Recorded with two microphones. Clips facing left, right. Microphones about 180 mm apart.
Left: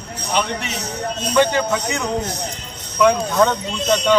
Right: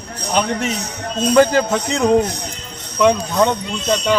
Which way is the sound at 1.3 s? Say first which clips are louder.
Right 4 dB; 40° right (ahead or behind).